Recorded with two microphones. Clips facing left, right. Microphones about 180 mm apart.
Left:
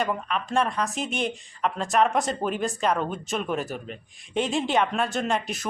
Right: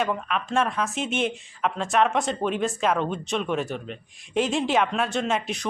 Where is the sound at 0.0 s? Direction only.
Centre (ahead or behind).